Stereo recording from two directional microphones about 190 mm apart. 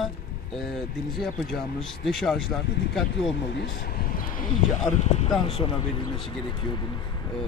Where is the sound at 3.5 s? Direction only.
55° left (ahead or behind).